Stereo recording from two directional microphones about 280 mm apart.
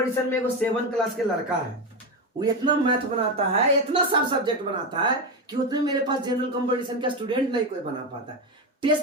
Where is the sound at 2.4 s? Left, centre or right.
Centre.